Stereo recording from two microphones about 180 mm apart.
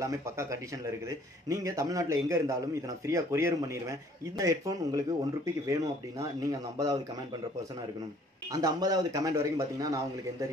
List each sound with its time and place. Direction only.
0.0 s speech: 15° right (ahead or behind)
8.5 s speech: 20° right (ahead or behind)